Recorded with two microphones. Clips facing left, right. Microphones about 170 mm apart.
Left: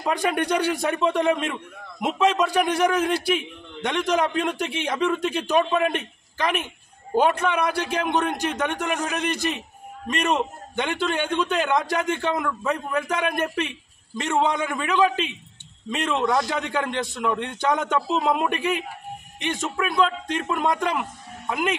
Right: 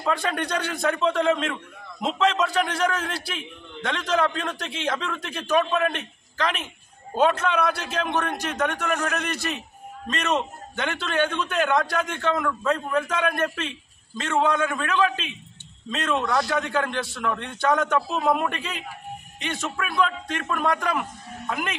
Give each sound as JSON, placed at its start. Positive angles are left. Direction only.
{"t": 0.0, "sound": "a man's voice", "side_deg": 15}